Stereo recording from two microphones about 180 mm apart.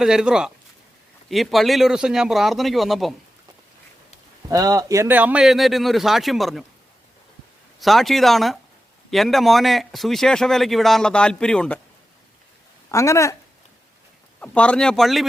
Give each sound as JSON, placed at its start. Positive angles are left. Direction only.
{"t": 0.0, "sound": "a man's voice", "side_deg": -5}
{"t": 4.4, "sound": "a man's voice", "side_deg": -20}
{"t": 7.8, "sound": "a man's voice", "side_deg": 0}
{"t": 12.9, "sound": "speech", "side_deg": 15}
{"t": 14.4, "sound": "a man's voice", "side_deg": 5}